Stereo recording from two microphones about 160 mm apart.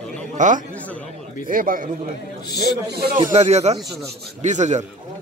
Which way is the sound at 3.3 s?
45° right (ahead or behind).